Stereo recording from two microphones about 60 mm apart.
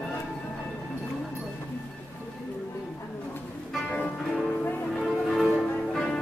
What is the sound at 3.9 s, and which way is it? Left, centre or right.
Music, centre.